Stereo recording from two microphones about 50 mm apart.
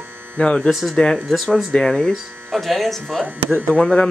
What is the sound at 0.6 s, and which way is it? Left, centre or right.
Speech, centre.